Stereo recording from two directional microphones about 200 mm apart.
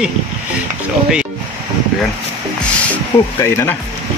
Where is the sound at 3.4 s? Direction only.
15° left (ahead or behind).